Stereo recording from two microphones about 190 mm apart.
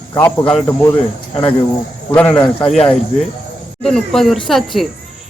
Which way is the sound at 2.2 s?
5° left (ahead or behind).